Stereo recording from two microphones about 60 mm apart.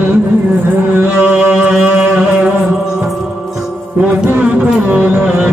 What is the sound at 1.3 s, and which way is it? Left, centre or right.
Music, centre.